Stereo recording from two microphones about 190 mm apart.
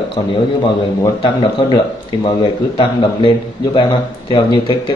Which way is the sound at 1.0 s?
20° left (ahead or behind).